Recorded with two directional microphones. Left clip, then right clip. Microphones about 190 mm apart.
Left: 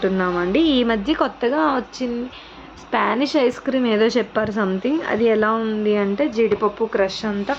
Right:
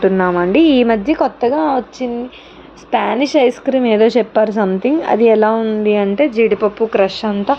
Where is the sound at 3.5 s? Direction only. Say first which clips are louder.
Right 6 dB; 5° right (ahead or behind).